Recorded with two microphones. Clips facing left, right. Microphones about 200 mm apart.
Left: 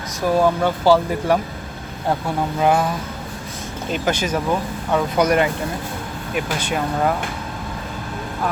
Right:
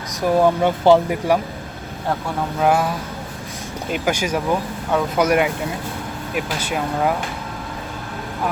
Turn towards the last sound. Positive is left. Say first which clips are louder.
# even
turn(degrees=0)  # may be behind; listen again after turning